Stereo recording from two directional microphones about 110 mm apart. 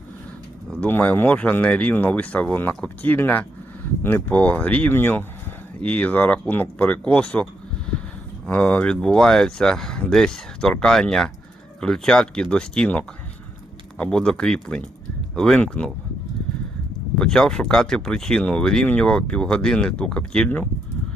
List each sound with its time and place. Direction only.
0.8 s speech: 15° left (ahead or behind)
8.4 s speech: 10° left (ahead or behind)
17.2 s speech: 5° left (ahead or behind)